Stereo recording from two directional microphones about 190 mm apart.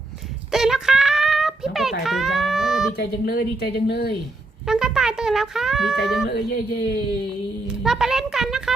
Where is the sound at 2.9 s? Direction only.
55° left (ahead or behind).